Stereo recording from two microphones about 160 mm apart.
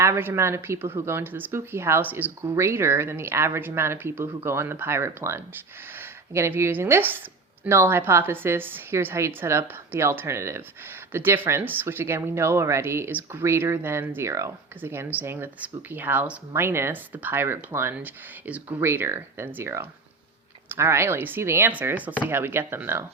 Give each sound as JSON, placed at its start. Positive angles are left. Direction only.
{"t": 0.0, "sound": "speech", "side_deg": -15}